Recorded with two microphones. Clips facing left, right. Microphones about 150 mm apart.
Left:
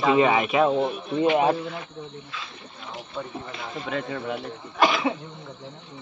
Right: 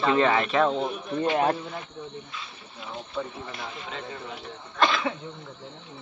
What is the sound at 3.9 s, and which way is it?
Speech, 70° left (ahead or behind).